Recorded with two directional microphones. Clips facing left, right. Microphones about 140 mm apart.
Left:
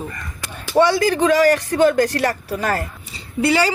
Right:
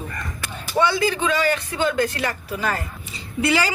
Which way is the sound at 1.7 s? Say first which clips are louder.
Left 7 dB; 50° left (ahead or behind).